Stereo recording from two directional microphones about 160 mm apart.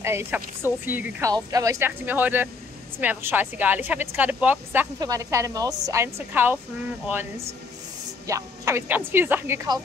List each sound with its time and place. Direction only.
0.0 s speech: 15° right (ahead or behind)
5.0 s a woman's voice: 20° right (ahead or behind)
8.3 s speech: 20° right (ahead or behind)